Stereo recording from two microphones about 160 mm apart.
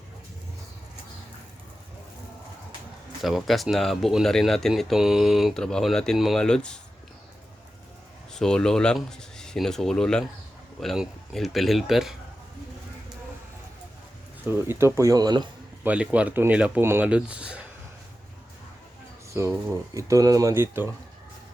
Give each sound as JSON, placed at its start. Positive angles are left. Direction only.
{"t": 3.2, "sound": "speech", "side_deg": 0}
{"t": 8.3, "sound": "speech", "side_deg": 5}
{"t": 14.4, "sound": "speech", "side_deg": -15}
{"t": 15.8, "sound": "speech", "side_deg": -10}
{"t": 19.3, "sound": "speech", "side_deg": -20}